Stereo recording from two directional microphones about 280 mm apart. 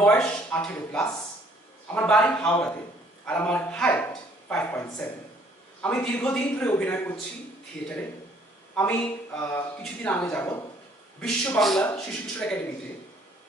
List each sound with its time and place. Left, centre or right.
0.0 s speech: centre
8.7 s speech: centre